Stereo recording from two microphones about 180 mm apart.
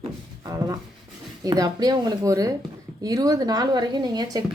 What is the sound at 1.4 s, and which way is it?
A woman's voice, 20° right (ahead or behind).